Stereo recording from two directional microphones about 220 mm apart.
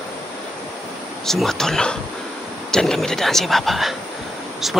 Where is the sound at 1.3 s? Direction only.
Centre (ahead or behind).